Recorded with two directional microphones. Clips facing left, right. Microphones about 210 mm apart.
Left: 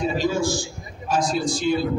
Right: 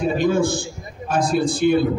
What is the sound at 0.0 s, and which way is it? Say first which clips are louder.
A man's voice: right 4 dB; 55° right (ahead or behind).